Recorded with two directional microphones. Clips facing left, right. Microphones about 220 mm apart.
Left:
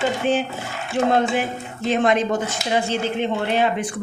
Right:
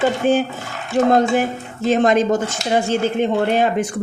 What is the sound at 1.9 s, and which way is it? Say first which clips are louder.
Speech: right 4 dB; 40° right (ahead or behind).